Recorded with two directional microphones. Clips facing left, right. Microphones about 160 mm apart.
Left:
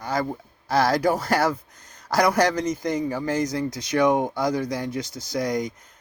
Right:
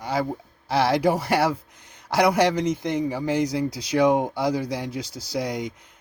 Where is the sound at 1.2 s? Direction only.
10° right (ahead or behind).